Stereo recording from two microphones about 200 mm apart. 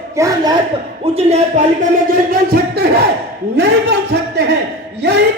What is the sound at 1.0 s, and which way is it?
Speech, 30° right (ahead or behind).